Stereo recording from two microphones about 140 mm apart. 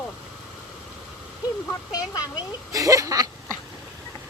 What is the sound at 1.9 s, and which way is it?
Speech, 25° left (ahead or behind).